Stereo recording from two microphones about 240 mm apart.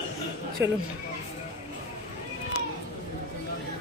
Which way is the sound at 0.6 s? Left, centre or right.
Centre.